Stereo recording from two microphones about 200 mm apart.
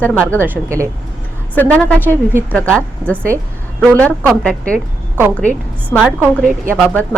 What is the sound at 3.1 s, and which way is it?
Speech, 10° right (ahead or behind).